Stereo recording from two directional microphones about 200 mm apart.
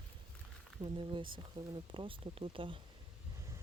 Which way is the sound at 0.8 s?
25° right (ahead or behind).